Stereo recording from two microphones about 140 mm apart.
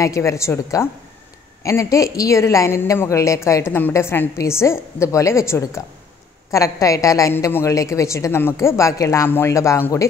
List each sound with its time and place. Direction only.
0.0 s a woman's voice: 20° left (ahead or behind)